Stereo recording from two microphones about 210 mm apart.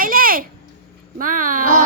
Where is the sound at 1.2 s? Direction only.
40° right (ahead or behind).